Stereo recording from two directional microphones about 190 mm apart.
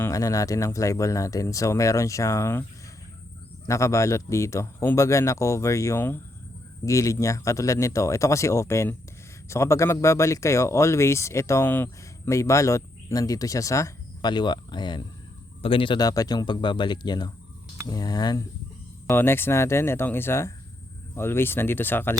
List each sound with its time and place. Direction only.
0.0 s speech: 15° left (ahead or behind)
3.7 s speech: 15° left (ahead or behind)